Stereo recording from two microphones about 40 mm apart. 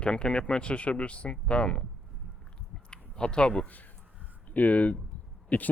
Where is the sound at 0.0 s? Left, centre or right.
Left.